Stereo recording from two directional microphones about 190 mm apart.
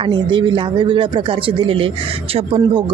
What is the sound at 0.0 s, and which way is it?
Speech, 25° right (ahead or behind).